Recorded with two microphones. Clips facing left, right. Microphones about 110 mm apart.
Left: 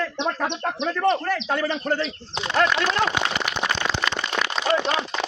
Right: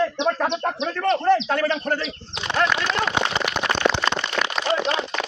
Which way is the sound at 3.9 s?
65° right (ahead or behind).